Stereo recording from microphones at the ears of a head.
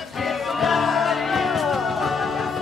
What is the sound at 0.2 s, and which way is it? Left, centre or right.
Music, left.